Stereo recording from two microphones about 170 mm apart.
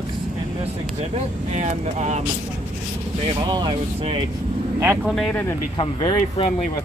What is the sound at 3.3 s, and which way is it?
Speech, 25° right (ahead or behind).